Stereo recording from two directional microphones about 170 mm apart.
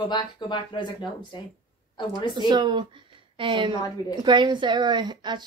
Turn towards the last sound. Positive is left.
turn(degrees=-25)  # may be behind; listen again after turning